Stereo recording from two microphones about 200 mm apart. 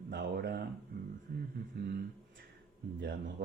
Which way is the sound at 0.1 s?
55° right (ahead or behind).